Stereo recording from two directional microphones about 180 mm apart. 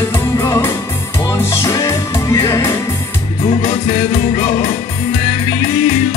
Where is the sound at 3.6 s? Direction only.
40° left (ahead or behind).